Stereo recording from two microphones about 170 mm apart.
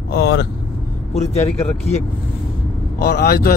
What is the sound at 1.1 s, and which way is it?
Speech, 40° left (ahead or behind).